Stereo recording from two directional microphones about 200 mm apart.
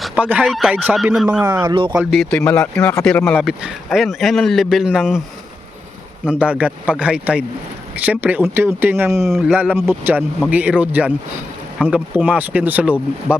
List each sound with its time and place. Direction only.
0.0 s speech: 5° right (ahead or behind)
1.6 s speech: 25° right (ahead or behind)
2.0 s speech: centre (ahead or behind)
6.2 s speech: 5° right (ahead or behind)